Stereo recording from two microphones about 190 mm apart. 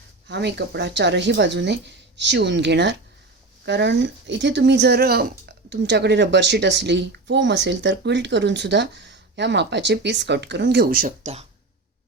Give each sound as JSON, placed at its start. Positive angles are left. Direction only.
{"t": 0.3, "sound": "speech", "side_deg": -65}